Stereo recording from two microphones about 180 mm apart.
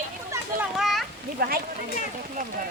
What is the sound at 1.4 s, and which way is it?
Speech, 55° right (ahead or behind).